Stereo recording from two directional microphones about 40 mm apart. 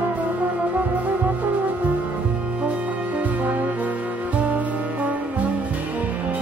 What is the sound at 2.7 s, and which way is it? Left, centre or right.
Music, right.